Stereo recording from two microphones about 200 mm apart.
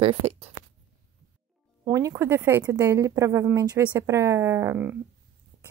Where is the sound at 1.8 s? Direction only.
15° right (ahead or behind).